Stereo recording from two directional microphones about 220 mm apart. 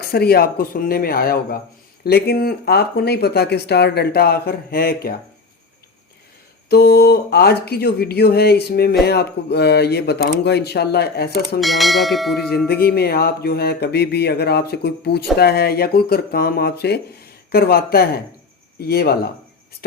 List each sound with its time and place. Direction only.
0.0 s speech: 45° left (ahead or behind)
6.7 s speech: 45° left (ahead or behind)
11.6 s church bell: centre (ahead or behind)
12.6 s speech: 45° left (ahead or behind)